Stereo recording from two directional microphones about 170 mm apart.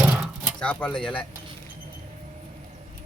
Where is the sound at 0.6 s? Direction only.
5° left (ahead or behind).